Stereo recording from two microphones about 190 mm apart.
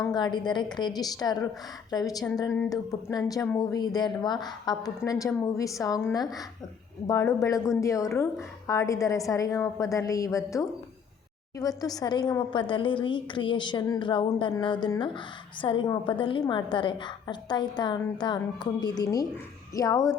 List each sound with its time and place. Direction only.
0.1 s a woman's voice: 25° left (ahead or behind)